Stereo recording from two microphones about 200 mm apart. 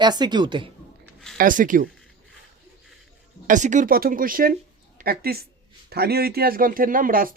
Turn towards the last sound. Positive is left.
turn(degrees=-45)  # may be behind; listen again after turning